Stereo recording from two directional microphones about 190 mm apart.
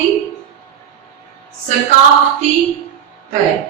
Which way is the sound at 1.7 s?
40° right (ahead or behind).